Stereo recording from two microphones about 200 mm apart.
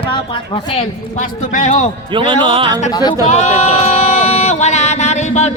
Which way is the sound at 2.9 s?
20° left (ahead or behind).